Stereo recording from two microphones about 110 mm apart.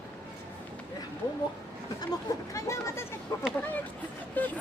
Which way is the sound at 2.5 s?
30° left (ahead or behind).